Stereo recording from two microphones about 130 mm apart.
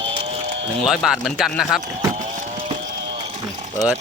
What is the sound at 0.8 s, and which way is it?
Speech, centre (ahead or behind).